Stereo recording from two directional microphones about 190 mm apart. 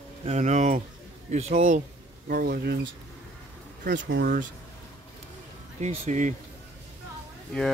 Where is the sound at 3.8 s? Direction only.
65° right (ahead or behind); by 4.5 s 50° right (ahead or behind).